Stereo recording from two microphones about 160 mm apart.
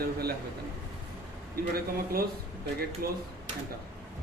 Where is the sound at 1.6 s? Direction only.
70° right (ahead or behind).